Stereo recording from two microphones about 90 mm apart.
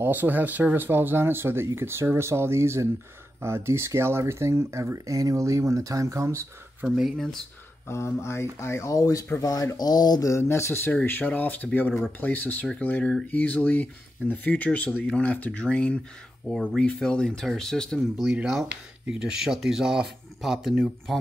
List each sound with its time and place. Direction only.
0.0 s speech: 20° right (ahead or behind)
7.0 s speech: centre (ahead or behind)
7.9 s speech: 30° left (ahead or behind); by 10.3 s 50° left (ahead or behind)
10.3 s speech: 30° left (ahead or behind); by 18.0 s 5° left (ahead or behind)
18.1 s speech: 10° right (ahead or behind)